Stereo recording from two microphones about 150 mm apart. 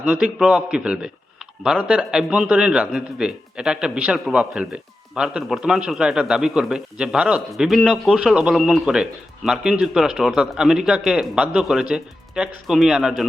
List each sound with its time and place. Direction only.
0.0 s a man's voice: 10° right (ahead or behind)